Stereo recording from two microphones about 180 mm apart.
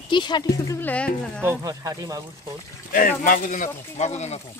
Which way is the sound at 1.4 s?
20° right (ahead or behind).